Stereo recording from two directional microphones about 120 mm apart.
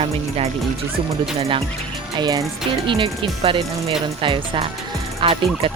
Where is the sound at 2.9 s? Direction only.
45° right (ahead or behind).